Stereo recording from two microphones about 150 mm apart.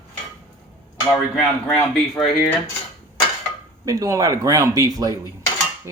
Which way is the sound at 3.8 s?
25° right (ahead or behind).